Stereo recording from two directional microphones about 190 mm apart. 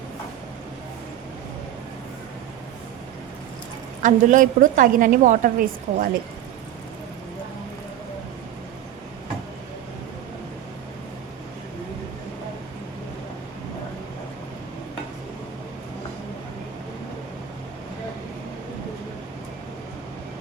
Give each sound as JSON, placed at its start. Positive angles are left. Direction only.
{"t": 4.0, "sound": "a woman's voice", "side_deg": -45}